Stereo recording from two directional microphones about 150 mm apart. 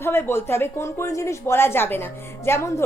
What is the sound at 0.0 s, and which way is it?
A woman's voice, 15° left (ahead or behind).